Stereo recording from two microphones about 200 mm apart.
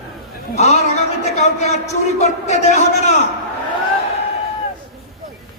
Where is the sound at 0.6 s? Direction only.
35° left (ahead or behind).